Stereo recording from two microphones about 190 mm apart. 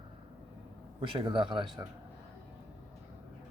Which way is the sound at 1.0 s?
25° right (ahead or behind).